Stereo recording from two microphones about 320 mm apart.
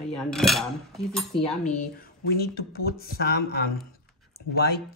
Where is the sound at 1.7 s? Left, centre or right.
Left.